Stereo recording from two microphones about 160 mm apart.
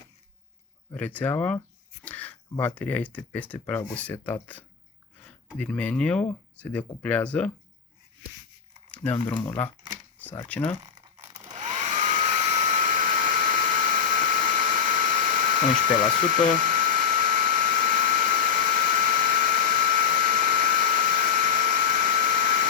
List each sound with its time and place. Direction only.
0.9 s speech: 10° left (ahead or behind)
9.6 s speech: 10° left (ahead or behind)
11.5 s hair dryer: 50° right (ahead or behind)